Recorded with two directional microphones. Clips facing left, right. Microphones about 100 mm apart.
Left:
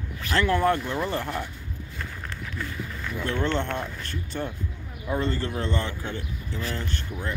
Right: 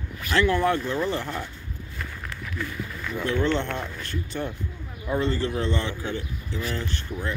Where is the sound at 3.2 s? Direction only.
45° left (ahead or behind).